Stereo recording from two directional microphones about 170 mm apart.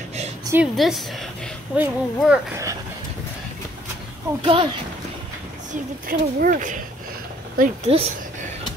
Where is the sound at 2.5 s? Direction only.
20° right (ahead or behind).